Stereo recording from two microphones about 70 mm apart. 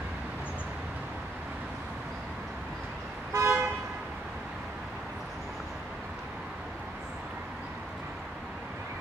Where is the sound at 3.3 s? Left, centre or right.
Right.